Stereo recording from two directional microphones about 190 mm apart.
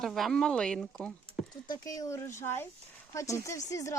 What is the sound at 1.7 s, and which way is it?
Speech, 20° left (ahead or behind).